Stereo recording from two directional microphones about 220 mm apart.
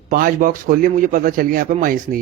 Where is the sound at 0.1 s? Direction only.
40° right (ahead or behind).